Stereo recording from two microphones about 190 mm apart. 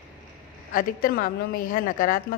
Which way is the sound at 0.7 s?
50° left (ahead or behind).